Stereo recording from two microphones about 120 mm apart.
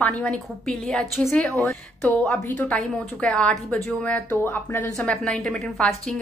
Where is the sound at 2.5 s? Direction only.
10° left (ahead or behind).